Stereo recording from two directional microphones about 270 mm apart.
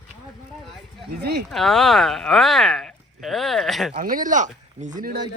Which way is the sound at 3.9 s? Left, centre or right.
Right.